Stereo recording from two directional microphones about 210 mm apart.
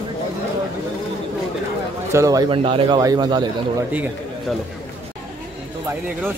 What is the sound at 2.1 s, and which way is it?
A man's voice, 15° right (ahead or behind).